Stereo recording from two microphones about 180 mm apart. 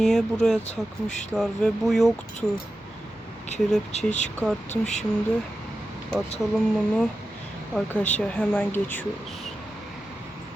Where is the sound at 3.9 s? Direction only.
35° left (ahead or behind).